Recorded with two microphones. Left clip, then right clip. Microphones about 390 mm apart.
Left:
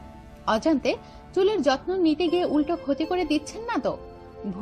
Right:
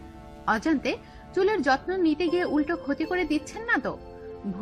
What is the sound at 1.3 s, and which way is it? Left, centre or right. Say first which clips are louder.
Speech: left 1 dB; centre.